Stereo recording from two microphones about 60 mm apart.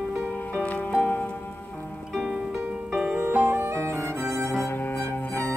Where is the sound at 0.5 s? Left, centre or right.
Left.